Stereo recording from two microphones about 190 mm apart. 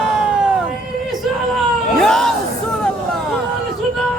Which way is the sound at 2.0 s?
5° left (ahead or behind).